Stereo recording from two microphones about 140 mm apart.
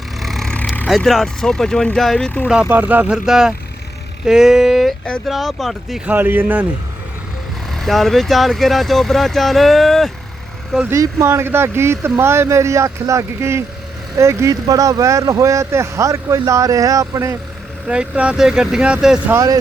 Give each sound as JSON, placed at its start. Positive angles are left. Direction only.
{"t": 0.2, "sound": "vehicle", "side_deg": 0}
{"t": 0.9, "sound": "speech", "side_deg": 0}
{"t": 2.5, "sound": "speech", "side_deg": -10}
{"t": 6.1, "sound": "speech", "side_deg": -15}
{"t": 7.7, "sound": "speech", "side_deg": 0}
{"t": 10.8, "sound": "speech", "side_deg": -20}
{"t": 17.8, "sound": "speech", "side_deg": -10}
{"t": 19.3, "sound": "speech", "side_deg": -25}